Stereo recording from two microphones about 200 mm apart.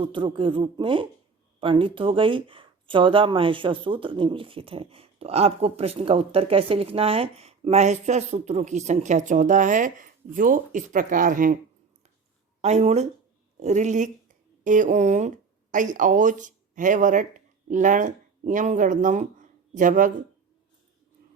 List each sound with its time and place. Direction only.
0.0 s speech: 25° right (ahead or behind); by 11.5 s 45° right (ahead or behind)
12.6 s speech: 35° right (ahead or behind)